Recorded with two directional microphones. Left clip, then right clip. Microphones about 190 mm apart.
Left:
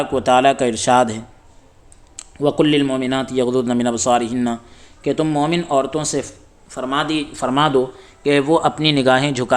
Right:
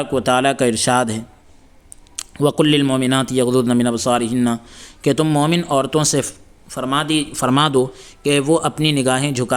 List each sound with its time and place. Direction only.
0.0 s speech: 10° right (ahead or behind)
2.1 s speech: 30° right (ahead or behind); by 4.6 s 15° right (ahead or behind)
4.7 s a man's voice: 35° right (ahead or behind); by 8.1 s 50° right (ahead or behind)
8.2 s speech: 30° right (ahead or behind)